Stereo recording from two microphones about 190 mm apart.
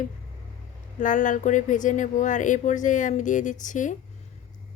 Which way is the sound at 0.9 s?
40° left (ahead or behind).